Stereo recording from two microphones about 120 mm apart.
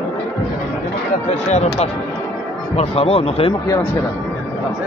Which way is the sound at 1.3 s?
65° left (ahead or behind).